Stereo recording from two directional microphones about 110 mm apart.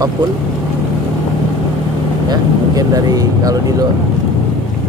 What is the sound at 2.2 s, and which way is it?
Speech, 35° right (ahead or behind).